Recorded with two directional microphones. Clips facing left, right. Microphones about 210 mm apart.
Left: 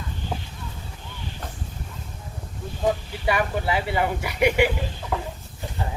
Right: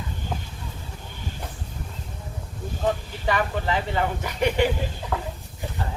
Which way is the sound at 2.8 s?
10° left (ahead or behind).